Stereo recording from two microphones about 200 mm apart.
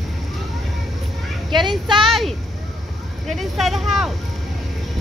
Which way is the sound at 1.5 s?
25° right (ahead or behind).